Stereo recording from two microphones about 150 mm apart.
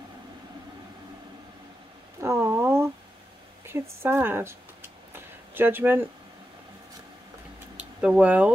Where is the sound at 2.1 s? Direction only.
15° right (ahead or behind).